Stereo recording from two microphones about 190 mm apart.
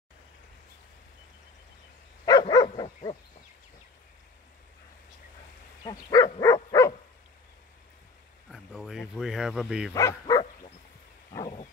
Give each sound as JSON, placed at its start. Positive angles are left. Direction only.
{"t": 2.2, "sound": "dog", "side_deg": 20}
{"t": 5.9, "sound": "dog", "side_deg": 20}
{"t": 8.5, "sound": "bow-wow", "side_deg": 0}
{"t": 9.9, "sound": "speech", "side_deg": 20}
{"t": 11.3, "sound": "wild animals", "side_deg": 25}